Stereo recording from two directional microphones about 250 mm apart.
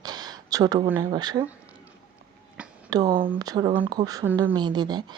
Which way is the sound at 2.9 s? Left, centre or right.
Centre.